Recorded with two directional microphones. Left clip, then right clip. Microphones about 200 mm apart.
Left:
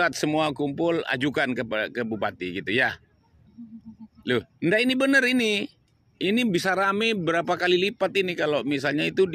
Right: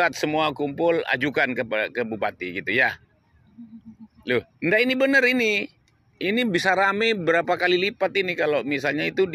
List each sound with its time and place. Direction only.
0.0 s speech: 50° left (ahead or behind)
4.2 s speech: 50° left (ahead or behind)